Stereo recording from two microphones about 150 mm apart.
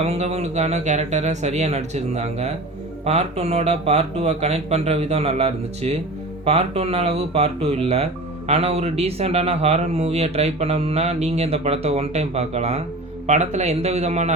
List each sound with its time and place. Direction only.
0.0 s a man's voice: 45° right (ahead or behind)